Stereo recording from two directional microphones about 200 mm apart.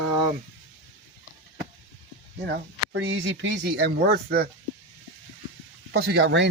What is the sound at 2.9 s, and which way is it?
Speech, 60° right (ahead or behind).